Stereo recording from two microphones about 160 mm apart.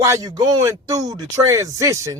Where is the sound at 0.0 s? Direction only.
20° right (ahead or behind).